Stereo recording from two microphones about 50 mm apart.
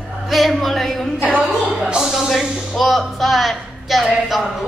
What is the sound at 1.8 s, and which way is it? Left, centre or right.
A woman's voice, centre.